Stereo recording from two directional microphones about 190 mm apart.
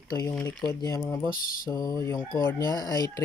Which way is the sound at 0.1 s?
15° left (ahead or behind).